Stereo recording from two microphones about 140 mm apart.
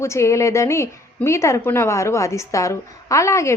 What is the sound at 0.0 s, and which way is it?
A woman's voice, 20° left (ahead or behind).